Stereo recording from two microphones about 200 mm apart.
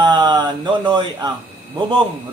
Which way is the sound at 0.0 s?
20° right (ahead or behind).